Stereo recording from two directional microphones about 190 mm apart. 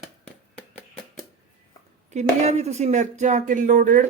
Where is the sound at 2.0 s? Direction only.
35° right (ahead or behind).